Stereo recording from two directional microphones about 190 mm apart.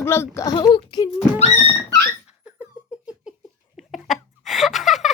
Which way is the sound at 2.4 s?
5° right (ahead or behind).